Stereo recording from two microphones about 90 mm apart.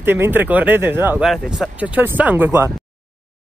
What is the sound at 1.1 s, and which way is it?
Speech, 5° right (ahead or behind).